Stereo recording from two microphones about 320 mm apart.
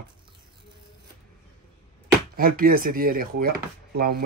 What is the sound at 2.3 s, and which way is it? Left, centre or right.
Speech, right.